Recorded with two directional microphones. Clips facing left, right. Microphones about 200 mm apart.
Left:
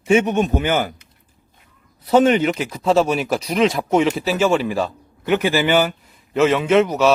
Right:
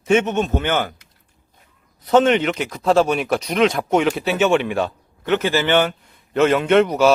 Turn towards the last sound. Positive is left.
turn(degrees=0)  # may be behind; listen again after turning